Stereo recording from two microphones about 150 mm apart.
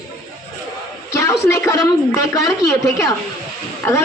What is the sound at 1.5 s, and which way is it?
Speech, 20° left (ahead or behind).